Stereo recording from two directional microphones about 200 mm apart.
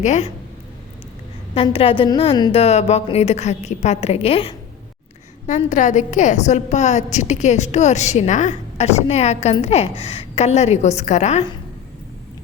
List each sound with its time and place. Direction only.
0.0 s a woman's voice: 35° left (ahead or behind)
1.5 s a woman's voice: 30° left (ahead or behind)